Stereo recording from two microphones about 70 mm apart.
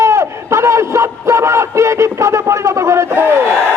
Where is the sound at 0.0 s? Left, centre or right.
Right.